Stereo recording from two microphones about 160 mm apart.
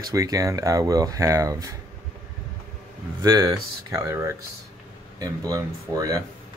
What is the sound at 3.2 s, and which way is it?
Speech, 20° right (ahead or behind).